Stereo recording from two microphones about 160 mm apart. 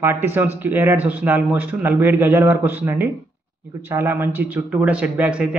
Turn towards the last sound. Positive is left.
turn(degrees=-5)  # may be behind; listen again after turning